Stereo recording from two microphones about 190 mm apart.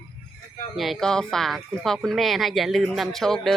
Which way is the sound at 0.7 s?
Centre (ahead or behind).